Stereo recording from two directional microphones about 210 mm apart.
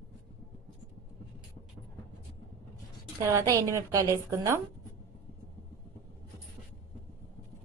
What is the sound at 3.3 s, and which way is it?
A woman's voice, 15° right (ahead or behind).